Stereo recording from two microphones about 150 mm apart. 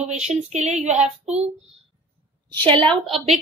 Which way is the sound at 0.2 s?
50° right (ahead or behind).